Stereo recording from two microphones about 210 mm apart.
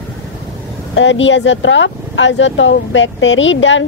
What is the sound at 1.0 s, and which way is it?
A woman's voice, 60° left (ahead or behind).